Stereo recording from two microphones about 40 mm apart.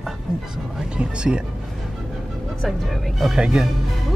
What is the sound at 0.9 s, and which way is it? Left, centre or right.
Speech, right.